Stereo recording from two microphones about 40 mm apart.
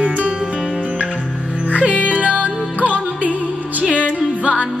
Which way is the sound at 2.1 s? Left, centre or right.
Right.